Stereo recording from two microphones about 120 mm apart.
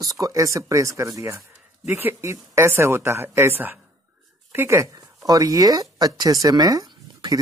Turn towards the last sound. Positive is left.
turn(degrees=-35)  # may be behind; listen again after turning